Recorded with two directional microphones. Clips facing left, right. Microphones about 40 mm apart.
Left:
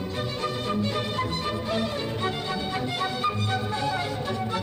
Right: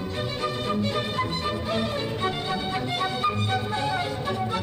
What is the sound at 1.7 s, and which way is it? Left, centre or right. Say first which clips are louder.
Music: right 1 dB; centre.